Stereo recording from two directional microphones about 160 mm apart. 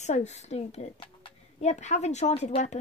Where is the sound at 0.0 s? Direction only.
45° left (ahead or behind).